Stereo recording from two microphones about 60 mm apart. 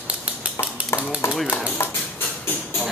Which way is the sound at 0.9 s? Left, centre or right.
Left.